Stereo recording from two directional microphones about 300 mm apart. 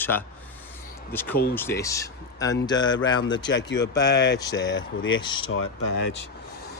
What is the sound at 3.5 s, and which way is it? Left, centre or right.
Speech, left.